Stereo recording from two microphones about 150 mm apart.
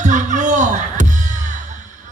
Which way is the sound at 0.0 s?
55° right (ahead or behind).